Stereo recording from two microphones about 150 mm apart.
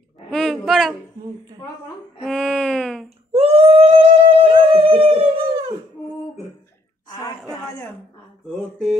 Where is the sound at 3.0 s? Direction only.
40° right (ahead or behind).